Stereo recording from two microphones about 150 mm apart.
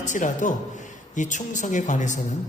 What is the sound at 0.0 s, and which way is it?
Speech, 55° left (ahead or behind).